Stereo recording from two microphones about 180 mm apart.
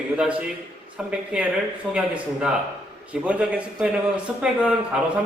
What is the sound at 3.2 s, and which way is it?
A man's voice, 5° right (ahead or behind).